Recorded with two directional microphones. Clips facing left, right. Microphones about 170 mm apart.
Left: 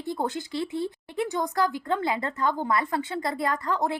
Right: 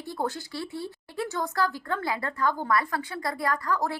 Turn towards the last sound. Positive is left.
turn(degrees=20)  # may be behind; listen again after turning